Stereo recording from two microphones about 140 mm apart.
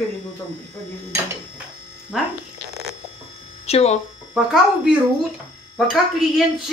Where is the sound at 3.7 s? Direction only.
45° left (ahead or behind).